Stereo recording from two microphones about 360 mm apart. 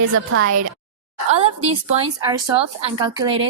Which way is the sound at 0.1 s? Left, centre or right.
Right.